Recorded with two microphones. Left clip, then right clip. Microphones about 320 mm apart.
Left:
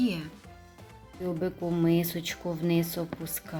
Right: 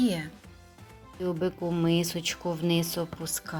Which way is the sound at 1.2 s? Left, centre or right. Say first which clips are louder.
Right 2 dB; centre.